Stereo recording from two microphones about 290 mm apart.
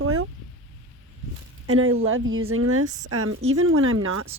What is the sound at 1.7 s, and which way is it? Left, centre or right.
Speech, right.